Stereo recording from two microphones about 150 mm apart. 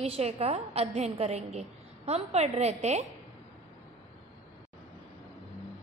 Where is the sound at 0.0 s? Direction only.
40° right (ahead or behind).